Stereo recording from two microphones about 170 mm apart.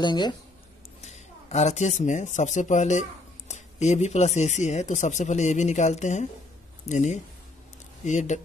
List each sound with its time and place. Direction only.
0.0 s speech: 25° left (ahead or behind)
1.0 s speech: 40° left (ahead or behind)